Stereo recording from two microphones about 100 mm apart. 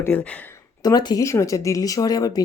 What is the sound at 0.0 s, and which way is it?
Speech, 15° left (ahead or behind).